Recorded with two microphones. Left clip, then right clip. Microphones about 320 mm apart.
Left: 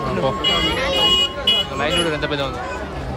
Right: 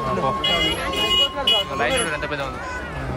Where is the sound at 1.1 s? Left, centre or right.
Right.